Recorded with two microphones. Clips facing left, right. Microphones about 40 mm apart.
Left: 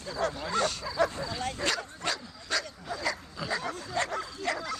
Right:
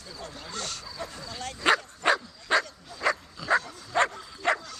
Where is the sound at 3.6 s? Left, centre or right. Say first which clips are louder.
Left 8 dB; left.